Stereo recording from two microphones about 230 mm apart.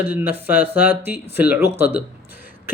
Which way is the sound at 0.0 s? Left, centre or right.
Centre.